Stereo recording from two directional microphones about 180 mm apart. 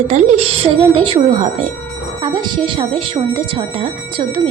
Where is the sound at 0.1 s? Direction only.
35° right (ahead or behind).